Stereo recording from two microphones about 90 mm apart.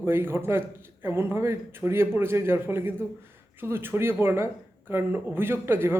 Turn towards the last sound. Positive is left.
turn(degrees=-25)  # may be behind; listen again after turning